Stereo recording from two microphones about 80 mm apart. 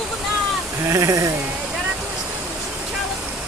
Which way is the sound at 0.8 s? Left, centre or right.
Right.